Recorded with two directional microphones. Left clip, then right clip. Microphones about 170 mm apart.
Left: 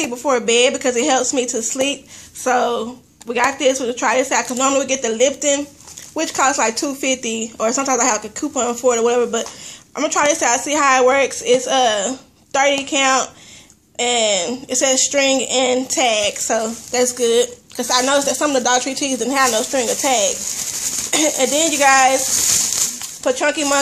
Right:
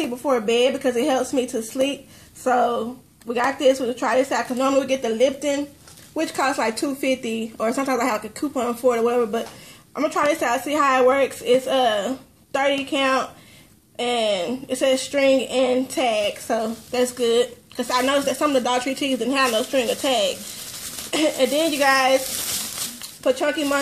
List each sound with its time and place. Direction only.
0.3 s a woman's voice: 10° right (ahead or behind)
23.2 s a woman's voice: 5° right (ahead or behind)